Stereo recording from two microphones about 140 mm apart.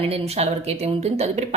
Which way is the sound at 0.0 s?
45° right (ahead or behind).